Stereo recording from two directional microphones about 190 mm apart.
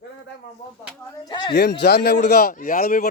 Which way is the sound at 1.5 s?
60° left (ahead or behind).